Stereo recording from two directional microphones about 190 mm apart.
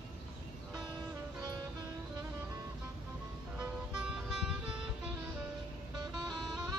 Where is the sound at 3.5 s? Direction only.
5° right (ahead or behind).